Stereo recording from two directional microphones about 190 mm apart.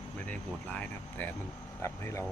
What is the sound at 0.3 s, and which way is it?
Speech, 5° left (ahead or behind).